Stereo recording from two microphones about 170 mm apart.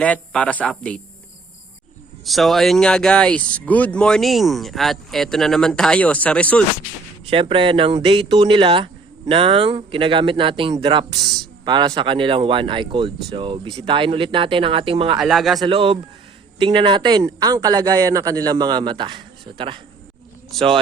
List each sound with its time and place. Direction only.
0.0 s speech: 5° left (ahead or behind)
2.2 s speech: centre (ahead or behind)
7.3 s speech: 30° right (ahead or behind)
15.2 s speech: centre (ahead or behind)
15.6 s speech: 30° right (ahead or behind)